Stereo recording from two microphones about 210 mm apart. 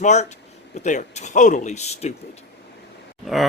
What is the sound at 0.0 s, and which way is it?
Speech, 35° left (ahead or behind).